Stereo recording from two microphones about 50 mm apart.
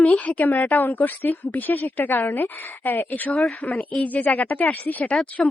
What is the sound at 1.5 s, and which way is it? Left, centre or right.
A woman's voice, left.